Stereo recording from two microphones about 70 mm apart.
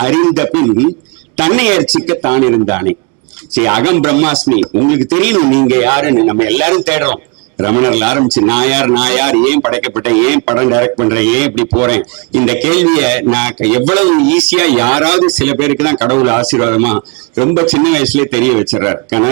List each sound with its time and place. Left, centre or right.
0.0 s speech: right